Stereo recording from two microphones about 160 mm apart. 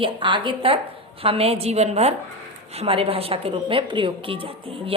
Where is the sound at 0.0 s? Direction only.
30° right (ahead or behind).